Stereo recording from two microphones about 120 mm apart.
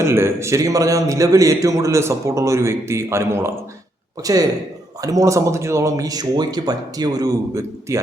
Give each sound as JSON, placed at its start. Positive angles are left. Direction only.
{"t": 0.0, "sound": "a man's voice", "side_deg": -20}